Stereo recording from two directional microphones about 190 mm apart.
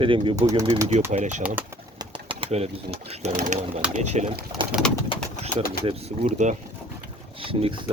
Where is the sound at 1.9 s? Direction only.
25° right (ahead or behind).